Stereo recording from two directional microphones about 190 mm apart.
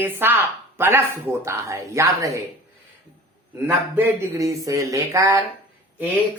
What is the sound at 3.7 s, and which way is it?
Speech, 10° right (ahead or behind).